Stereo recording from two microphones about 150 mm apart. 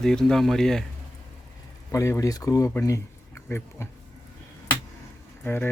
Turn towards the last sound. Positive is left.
turn(degrees=15)  # may be behind; listen again after turning